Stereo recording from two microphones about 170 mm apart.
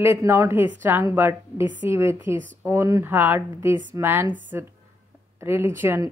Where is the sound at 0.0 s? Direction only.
15° right (ahead or behind).